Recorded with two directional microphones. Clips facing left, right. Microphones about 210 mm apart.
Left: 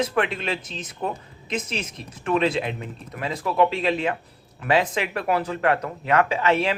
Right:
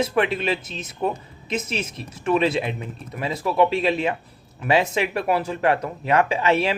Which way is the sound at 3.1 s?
10° right (ahead or behind).